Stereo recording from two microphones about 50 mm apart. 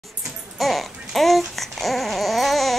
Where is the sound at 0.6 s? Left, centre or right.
Centre.